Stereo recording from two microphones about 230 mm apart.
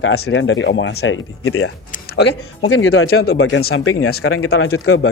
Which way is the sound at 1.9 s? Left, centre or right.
Left.